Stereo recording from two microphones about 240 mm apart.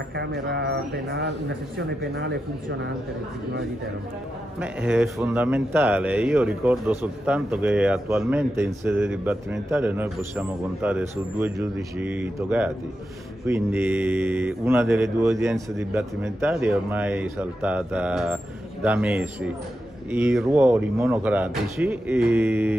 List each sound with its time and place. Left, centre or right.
0.1 s speech: right
4.6 s a man's voice: centre